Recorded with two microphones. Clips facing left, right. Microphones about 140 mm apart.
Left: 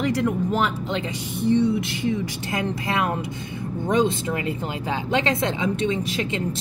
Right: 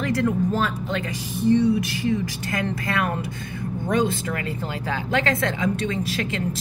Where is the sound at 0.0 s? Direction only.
20° left (ahead or behind).